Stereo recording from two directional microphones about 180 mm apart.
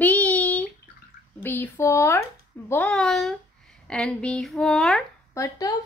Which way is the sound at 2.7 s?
5° left (ahead or behind).